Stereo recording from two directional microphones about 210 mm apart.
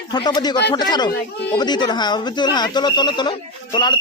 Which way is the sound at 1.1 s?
50° left (ahead or behind).